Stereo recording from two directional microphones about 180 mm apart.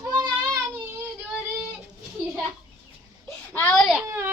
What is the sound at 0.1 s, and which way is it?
Child singing, 20° right (ahead or behind).